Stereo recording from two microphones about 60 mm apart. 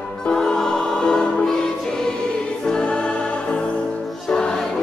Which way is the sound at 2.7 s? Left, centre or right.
Centre.